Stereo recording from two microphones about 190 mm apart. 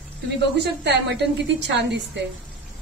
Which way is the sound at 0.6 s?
65° right (ahead or behind).